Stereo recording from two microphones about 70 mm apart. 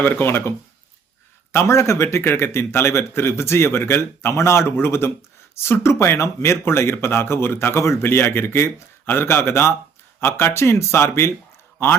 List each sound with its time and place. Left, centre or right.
0.0 s speech: left
1.5 s speech: left